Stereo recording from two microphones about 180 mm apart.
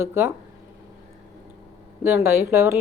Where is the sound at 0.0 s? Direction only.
15° right (ahead or behind).